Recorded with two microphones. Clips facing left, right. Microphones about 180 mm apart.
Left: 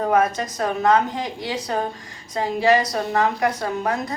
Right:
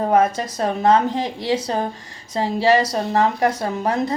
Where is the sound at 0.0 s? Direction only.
30° right (ahead or behind).